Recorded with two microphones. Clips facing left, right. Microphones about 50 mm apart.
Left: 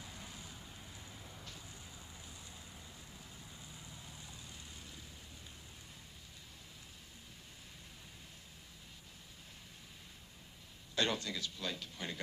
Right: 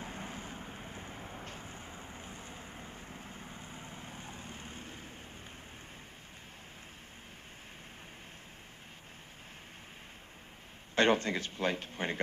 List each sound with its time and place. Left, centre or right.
0.0 s vehicle: right
11.0 s a man's voice: right